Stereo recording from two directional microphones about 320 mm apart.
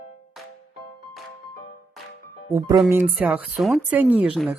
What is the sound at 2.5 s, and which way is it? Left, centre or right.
Speech, centre.